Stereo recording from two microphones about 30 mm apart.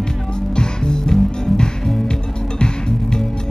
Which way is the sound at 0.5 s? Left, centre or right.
Left.